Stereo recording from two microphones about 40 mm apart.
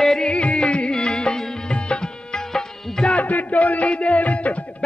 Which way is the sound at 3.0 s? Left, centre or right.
Left.